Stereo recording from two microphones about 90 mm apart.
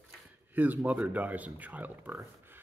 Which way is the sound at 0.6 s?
15° right (ahead or behind).